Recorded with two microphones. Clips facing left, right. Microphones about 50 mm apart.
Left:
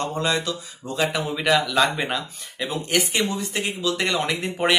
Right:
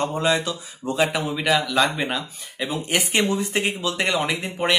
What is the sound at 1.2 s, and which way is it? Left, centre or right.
Speech, centre.